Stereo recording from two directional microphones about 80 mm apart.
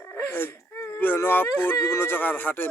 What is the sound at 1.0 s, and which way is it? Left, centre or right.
A man's voice, left.